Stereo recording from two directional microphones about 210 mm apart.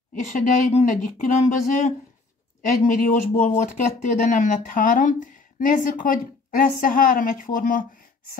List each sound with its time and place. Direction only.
0.1 s speech: 35° left (ahead or behind)